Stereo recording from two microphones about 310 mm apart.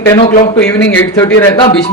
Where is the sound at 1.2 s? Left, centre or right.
Centre.